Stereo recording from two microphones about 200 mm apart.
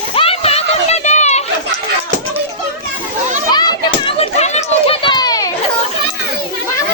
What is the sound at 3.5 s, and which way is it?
Children playing, 20° left (ahead or behind).